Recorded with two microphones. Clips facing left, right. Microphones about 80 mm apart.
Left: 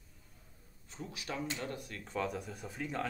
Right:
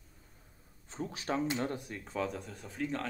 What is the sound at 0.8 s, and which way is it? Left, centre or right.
Speech, right.